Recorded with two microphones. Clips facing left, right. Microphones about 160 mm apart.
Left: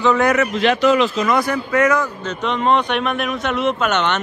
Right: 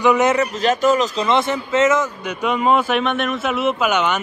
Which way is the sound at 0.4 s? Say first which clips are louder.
Left 1 dB; 40° right (ahead or behind).